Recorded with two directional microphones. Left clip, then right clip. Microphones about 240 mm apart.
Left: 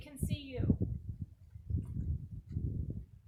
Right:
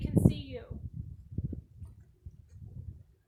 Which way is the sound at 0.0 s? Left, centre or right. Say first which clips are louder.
Right 14 dB; centre.